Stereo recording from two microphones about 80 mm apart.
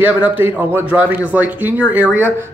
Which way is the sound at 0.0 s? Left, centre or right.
Right.